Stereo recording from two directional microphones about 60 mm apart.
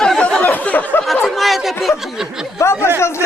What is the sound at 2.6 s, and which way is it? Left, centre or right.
Speech, left.